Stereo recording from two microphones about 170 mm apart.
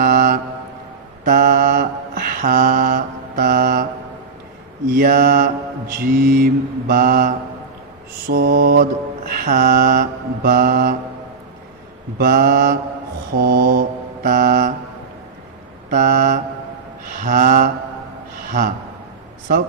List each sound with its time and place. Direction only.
0.0 s mantra: 55° right (ahead or behind)
4.9 s mantra: 55° right (ahead or behind)
12.1 s mantra: 55° right (ahead or behind)
15.9 s mantra: 50° right (ahead or behind)